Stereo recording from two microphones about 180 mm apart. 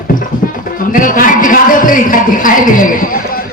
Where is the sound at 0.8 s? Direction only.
50° left (ahead or behind).